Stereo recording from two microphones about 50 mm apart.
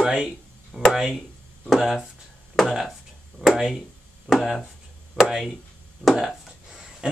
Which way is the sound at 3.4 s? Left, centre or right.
Centre.